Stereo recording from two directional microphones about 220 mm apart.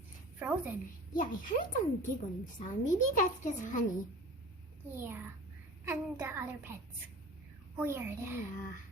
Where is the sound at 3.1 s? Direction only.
35° left (ahead or behind).